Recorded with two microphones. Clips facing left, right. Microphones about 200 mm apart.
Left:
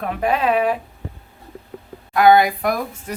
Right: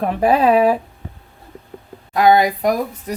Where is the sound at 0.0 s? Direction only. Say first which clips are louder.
Right 5 dB; 35° right (ahead or behind).